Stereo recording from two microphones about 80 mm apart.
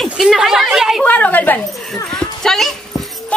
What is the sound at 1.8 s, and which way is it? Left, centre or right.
Dog, centre.